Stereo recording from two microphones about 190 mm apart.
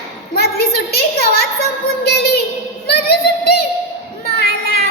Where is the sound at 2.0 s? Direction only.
60° left (ahead or behind).